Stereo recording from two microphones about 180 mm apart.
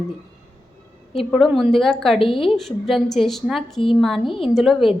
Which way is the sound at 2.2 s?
30° left (ahead or behind).